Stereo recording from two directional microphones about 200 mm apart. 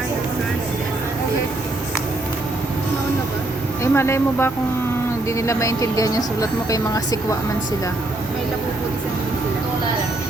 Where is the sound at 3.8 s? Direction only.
15° left (ahead or behind).